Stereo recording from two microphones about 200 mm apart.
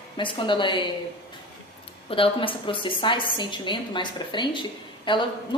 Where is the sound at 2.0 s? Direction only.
25° left (ahead or behind).